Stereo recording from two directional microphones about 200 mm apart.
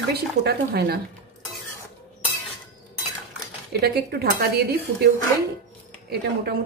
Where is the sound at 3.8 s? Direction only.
50° right (ahead or behind).